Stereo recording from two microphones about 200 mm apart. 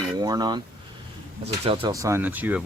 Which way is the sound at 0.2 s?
20° right (ahead or behind).